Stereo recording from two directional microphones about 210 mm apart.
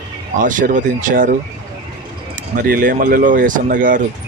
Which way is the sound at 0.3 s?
40° right (ahead or behind).